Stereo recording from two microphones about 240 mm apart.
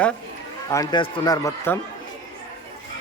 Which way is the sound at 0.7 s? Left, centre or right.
Centre.